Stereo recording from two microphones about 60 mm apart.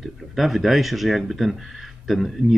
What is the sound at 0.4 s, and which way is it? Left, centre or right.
Speech, centre.